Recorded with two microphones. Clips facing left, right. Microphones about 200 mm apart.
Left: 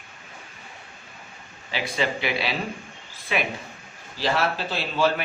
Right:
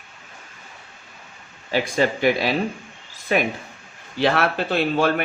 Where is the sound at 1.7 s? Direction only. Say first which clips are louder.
Right 6 dB; 45° right (ahead or behind).